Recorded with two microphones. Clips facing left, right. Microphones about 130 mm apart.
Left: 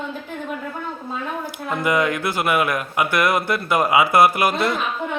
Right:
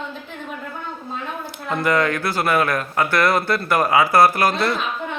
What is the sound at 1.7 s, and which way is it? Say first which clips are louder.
Speech: right 1 dB; 15° left (ahead or behind).